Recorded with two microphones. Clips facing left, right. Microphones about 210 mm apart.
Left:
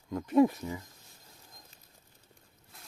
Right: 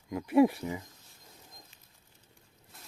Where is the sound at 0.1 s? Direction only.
10° right (ahead or behind).